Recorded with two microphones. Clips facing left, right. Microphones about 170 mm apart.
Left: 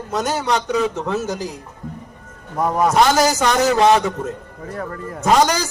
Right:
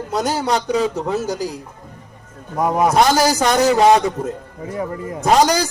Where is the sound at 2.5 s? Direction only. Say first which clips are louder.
Right 1 dB; 15° right (ahead or behind).